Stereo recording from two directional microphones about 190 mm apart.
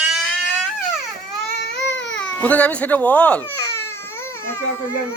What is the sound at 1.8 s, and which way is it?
Baby cry, 65° left (ahead or behind).